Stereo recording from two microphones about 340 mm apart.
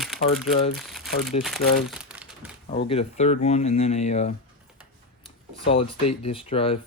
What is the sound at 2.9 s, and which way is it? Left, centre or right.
Speech, centre.